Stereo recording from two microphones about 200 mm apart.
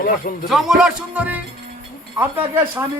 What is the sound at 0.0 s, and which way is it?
Speech, 45° left (ahead or behind).